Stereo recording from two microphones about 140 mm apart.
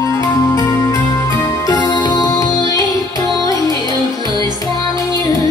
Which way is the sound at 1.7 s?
30° left (ahead or behind).